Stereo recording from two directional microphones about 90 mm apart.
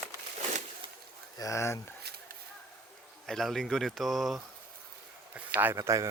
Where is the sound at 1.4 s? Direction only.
35° left (ahead or behind).